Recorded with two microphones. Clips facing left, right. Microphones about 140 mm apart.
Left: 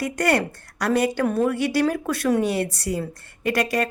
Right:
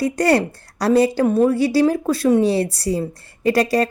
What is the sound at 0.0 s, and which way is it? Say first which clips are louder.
A woman's voice: right 5 dB; 30° right (ahead or behind).